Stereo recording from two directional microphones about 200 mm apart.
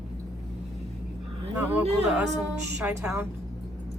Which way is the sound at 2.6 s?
15° right (ahead or behind).